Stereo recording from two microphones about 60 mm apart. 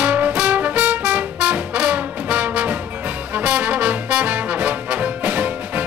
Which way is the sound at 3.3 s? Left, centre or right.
Right.